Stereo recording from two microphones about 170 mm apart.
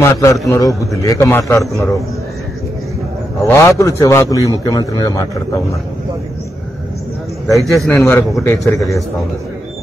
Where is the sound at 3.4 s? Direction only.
15° left (ahead or behind).